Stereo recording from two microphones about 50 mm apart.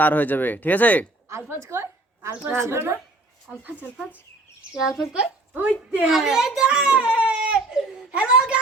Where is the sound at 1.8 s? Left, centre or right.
Right.